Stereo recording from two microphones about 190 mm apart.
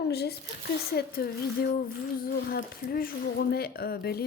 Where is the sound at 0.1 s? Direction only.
60° left (ahead or behind).